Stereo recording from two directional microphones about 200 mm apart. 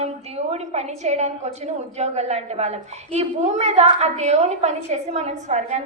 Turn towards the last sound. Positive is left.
turn(degrees=-35)  # may be behind; listen again after turning